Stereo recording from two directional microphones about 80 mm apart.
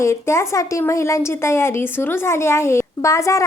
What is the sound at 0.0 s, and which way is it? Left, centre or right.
A woman's voice, left.